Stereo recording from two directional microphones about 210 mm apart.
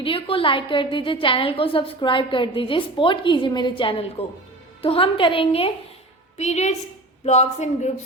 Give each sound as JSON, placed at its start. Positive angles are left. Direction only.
{"t": 0.0, "sound": "a woman's voice", "side_deg": 25}